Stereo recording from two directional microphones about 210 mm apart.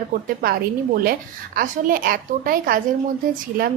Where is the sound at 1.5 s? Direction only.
40° right (ahead or behind).